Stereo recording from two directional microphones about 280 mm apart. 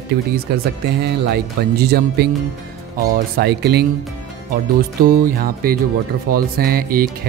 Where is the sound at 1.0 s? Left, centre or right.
Right.